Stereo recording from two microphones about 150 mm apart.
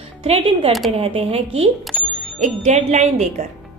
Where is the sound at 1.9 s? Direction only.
Centre (ahead or behind).